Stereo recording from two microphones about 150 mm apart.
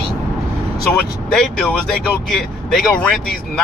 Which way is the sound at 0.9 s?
5° left (ahead or behind).